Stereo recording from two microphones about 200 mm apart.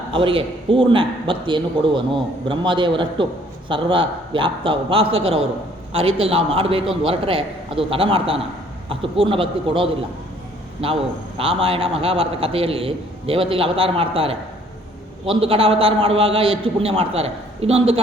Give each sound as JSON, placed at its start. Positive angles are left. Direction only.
{"t": 0.1, "sound": "a man's voice", "side_deg": -25}